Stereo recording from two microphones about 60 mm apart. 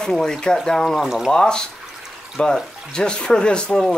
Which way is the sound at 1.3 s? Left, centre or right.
Centre.